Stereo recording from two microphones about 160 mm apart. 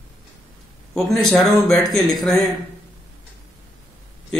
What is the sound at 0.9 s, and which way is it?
Speech, centre (ahead or behind).